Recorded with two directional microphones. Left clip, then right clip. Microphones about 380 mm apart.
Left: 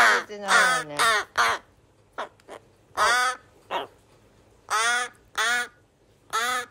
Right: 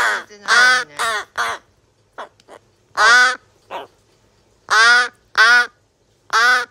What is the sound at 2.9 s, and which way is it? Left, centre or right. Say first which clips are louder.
Crow: right 10 dB; right.